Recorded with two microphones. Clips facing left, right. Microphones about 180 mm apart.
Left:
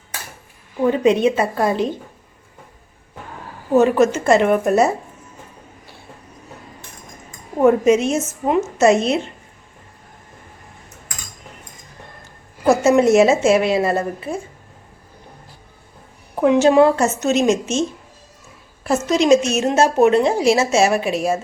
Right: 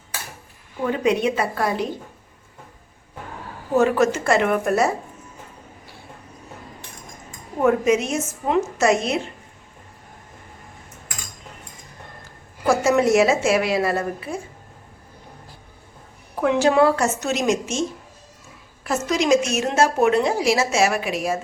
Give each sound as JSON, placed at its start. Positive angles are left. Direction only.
{"t": 1.0, "sound": "a woman's voice", "side_deg": 25}
{"t": 3.8, "sound": "a woman's voice", "side_deg": 20}
{"t": 7.6, "sound": "a woman's voice", "side_deg": 25}
{"t": 12.6, "sound": "a woman's voice", "side_deg": 25}
{"t": 16.3, "sound": "a woman's voice", "side_deg": 20}
{"t": 18.9, "sound": "a woman's voice", "side_deg": 25}